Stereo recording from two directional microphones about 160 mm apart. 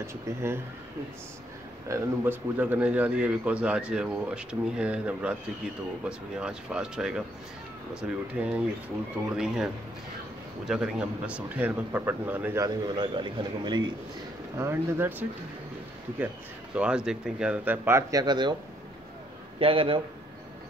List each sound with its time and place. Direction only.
0.0 s a man's voice: 15° right (ahead or behind)
1.9 s a man's voice: 10° right (ahead or behind)
10.7 s a man's voice: 5° right (ahead or behind)
12.6 s a man's voice: 25° right (ahead or behind)
14.6 s a man's voice: 15° right (ahead or behind)
16.7 s a man's voice: 5° right (ahead or behind); by 18.6 s 30° right (ahead or behind)
19.6 s a man's voice: 35° right (ahead or behind)